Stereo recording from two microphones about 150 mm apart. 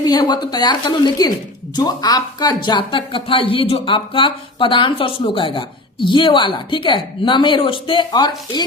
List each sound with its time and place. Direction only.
0.0 s a woman's voice: 30° left (ahead or behind)